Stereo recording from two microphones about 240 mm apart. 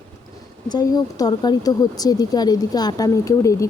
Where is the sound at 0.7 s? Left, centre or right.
Centre.